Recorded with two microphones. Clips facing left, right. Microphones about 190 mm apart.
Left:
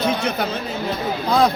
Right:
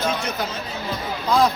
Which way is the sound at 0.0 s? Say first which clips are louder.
Left 4 dB; 65° left (ahead or behind).